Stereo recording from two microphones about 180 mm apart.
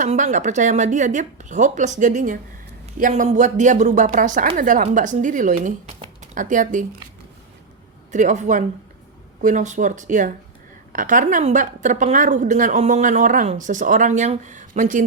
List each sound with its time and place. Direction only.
0.0 s a woman's voice: 45° right (ahead or behind)
8.1 s a woman's voice: 40° right (ahead or behind)